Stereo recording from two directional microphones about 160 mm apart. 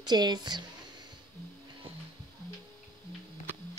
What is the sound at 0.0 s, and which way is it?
Speech, 25° right (ahead or behind).